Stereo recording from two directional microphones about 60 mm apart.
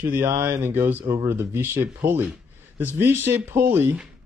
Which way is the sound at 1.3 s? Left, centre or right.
Right.